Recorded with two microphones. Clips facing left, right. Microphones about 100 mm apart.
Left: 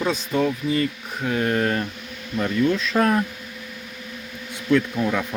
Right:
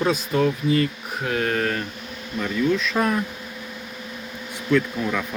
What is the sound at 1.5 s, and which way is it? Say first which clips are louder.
Speech: left 2 dB; 30° left (ahead or behind).